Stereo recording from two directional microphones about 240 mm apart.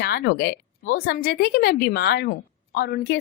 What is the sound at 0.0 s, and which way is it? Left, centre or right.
A woman's voice, left.